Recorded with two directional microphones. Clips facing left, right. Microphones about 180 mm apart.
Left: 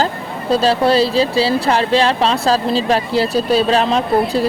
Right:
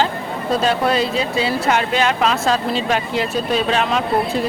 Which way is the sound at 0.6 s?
30° left (ahead or behind).